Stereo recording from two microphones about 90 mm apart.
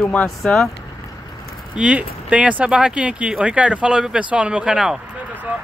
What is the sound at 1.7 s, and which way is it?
Speech, 15° right (ahead or behind).